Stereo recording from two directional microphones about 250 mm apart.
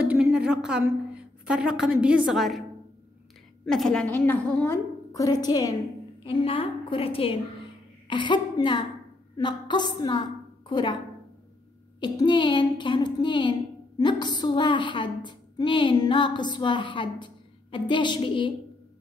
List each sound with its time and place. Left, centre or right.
0.0 s a woman's voice: centre
3.6 s a woman's voice: centre
12.0 s a woman's voice: centre